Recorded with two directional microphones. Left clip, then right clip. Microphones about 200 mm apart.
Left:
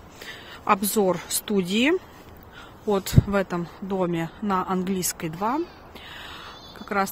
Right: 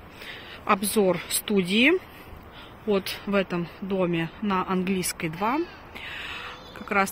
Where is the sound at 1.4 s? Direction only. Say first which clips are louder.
Right 3 dB; 20° left (ahead or behind).